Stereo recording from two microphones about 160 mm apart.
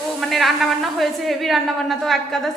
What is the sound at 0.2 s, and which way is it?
A woman's voice, centre (ahead or behind).